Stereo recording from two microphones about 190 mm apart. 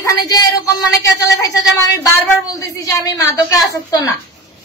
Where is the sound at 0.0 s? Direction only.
20° left (ahead or behind).